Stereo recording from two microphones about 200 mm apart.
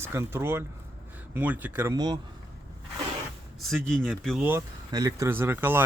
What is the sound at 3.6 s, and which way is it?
Speech, centre (ahead or behind).